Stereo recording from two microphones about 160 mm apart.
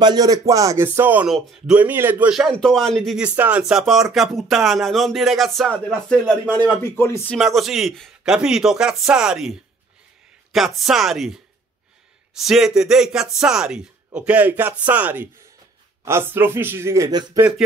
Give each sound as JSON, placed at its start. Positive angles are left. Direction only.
{"t": 0.0, "sound": "speech", "side_deg": -25}
{"t": 7.3, "sound": "speech", "side_deg": 0}